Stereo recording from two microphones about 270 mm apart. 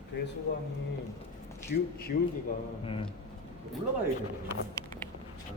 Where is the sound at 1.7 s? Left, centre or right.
Left.